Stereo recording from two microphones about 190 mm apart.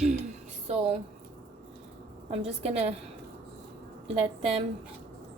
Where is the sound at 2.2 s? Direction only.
35° right (ahead or behind).